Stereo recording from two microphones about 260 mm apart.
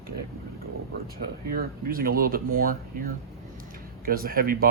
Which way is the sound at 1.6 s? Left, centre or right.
Right.